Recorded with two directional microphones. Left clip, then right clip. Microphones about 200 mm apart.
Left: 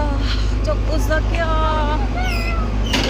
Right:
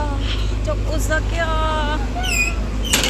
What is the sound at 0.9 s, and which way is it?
Vehicle, 5° left (ahead or behind).